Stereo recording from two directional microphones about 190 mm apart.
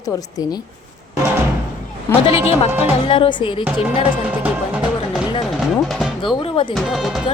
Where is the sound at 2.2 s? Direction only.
30° left (ahead or behind).